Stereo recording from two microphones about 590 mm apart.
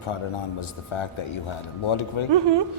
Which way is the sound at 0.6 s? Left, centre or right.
Left.